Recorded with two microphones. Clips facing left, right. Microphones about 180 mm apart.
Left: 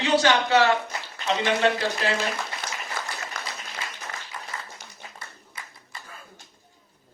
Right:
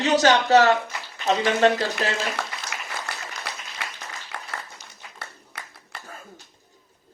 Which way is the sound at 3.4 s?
55° left (ahead or behind).